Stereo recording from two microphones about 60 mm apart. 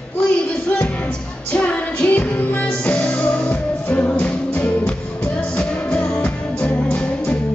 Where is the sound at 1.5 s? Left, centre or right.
Left.